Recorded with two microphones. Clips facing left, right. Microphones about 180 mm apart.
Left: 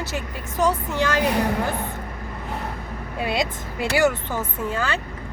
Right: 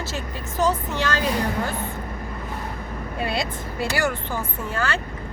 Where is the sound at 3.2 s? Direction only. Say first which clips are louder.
Left 2 dB; 15° left (ahead or behind).